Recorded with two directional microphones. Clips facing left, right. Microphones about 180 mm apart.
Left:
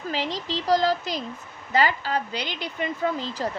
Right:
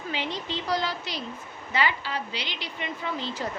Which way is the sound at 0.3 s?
90° left.